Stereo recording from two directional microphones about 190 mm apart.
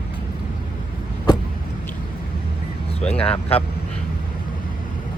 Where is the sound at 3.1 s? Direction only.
30° left (ahead or behind).